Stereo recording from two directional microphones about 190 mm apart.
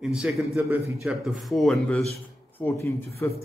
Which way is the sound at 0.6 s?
15° right (ahead or behind).